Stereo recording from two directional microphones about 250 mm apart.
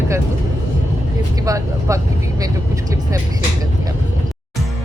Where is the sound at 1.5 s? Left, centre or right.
Centre.